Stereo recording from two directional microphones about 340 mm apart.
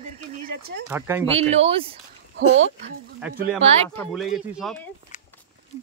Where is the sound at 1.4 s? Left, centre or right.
Centre.